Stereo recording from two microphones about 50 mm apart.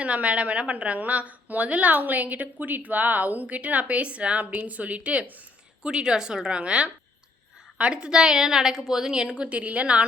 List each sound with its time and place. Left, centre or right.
0.0 s a woman's voice: right
5.8 s a woman's voice: centre